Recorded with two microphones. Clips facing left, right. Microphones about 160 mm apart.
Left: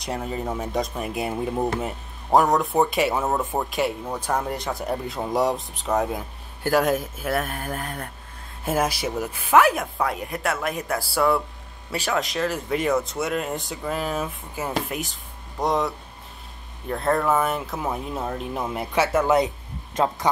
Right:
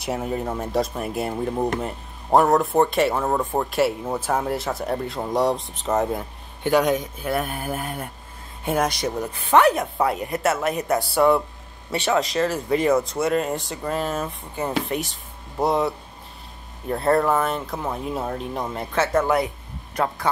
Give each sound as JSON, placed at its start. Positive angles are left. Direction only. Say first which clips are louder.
{"t": 0.0, "sound": "speech", "louder": "right 3 dB", "side_deg": -5}
{"t": 16.9, "sound": "speech", "louder": "right 2 dB", "side_deg": 0}
{"t": 19.2, "sound": "speech", "louder": "left 2 dB", "side_deg": 20}